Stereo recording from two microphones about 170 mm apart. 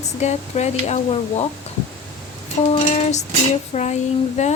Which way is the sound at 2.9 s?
40° left (ahead or behind).